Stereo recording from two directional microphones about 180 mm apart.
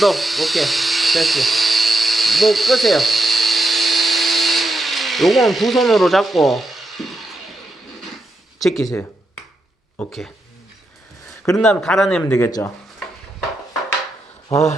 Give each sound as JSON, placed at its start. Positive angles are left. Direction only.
{"t": 0.0, "sound": "speech", "side_deg": 0}
{"t": 8.5, "sound": "speech", "side_deg": 0}
{"t": 10.0, "sound": "speech", "side_deg": 0}
{"t": 11.5, "sound": "speech", "side_deg": 5}
{"t": 12.4, "sound": "speech", "side_deg": 20}